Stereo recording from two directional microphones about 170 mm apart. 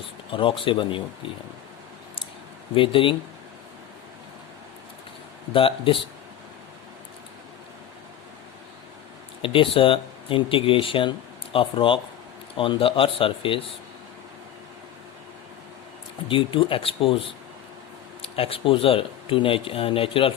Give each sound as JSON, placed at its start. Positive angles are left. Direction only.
{"t": 0.3, "sound": "speech", "side_deg": 30}
{"t": 2.7, "sound": "speech", "side_deg": 30}
{"t": 5.5, "sound": "speech", "side_deg": 30}
{"t": 9.4, "sound": "speech", "side_deg": 30}
{"t": 16.3, "sound": "speech", "side_deg": 30}